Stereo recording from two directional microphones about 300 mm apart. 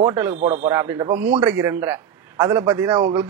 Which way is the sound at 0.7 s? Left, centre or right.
Centre.